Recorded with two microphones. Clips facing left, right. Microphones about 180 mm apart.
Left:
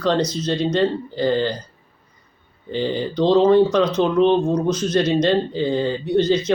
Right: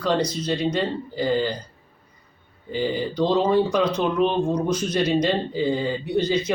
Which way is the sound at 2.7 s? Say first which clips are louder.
Left 2 dB; 10° right (ahead or behind).